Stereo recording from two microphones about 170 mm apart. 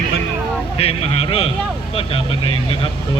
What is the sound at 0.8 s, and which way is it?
Speech, 35° left (ahead or behind).